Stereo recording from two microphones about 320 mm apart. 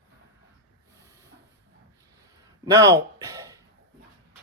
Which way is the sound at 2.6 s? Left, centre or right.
Centre.